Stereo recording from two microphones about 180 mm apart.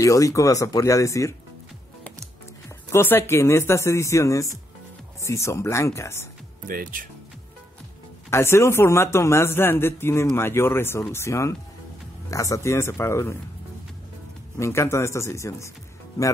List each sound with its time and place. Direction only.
0.0 s a man's voice: 20° left (ahead or behind)
2.9 s a man's voice: 15° left (ahead or behind)
6.7 s speech: 50° right (ahead or behind)
8.3 s a man's voice: 15° left (ahead or behind)
14.6 s a man's voice: 15° left (ahead or behind)